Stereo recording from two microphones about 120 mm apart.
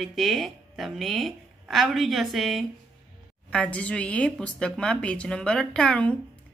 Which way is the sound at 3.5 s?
10° left (ahead or behind).